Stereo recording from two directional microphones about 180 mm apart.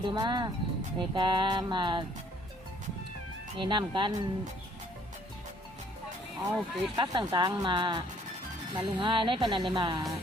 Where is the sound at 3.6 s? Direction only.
25° right (ahead or behind).